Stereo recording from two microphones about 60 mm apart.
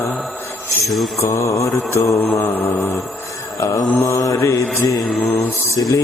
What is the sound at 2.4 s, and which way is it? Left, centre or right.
Mantra, left.